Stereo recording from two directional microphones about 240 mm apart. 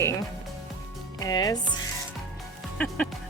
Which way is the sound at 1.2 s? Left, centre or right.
Centre.